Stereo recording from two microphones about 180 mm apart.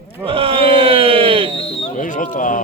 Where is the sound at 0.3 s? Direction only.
30° right (ahead or behind).